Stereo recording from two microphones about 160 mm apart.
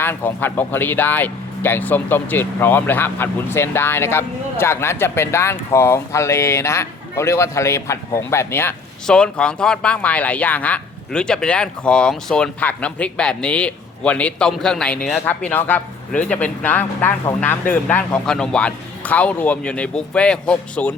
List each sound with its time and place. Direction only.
0.0 s speech: 15° left (ahead or behind)